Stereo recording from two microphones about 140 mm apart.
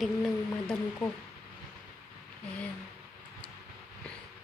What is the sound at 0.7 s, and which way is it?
Speech, 15° left (ahead or behind).